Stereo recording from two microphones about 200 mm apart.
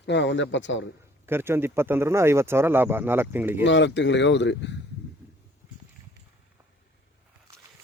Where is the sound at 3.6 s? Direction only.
65° left (ahead or behind).